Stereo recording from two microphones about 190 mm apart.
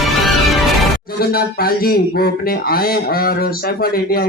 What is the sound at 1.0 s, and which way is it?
Speech, 55° left (ahead or behind).